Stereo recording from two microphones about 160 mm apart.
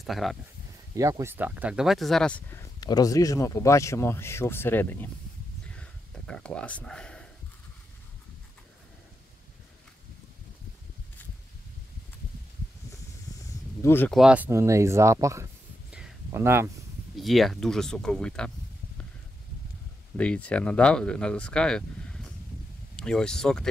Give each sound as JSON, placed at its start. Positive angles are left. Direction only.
{"t": 0.0, "sound": "speech", "side_deg": 0}
{"t": 0.9, "sound": "speech", "side_deg": -20}
{"t": 5.7, "sound": "a sound", "side_deg": 5}
{"t": 13.8, "sound": "speech", "side_deg": 15}
{"t": 14.1, "sound": "speech", "side_deg": -5}
{"t": 17.2, "sound": "speech", "side_deg": 0}
{"t": 20.2, "sound": "speech", "side_deg": 10}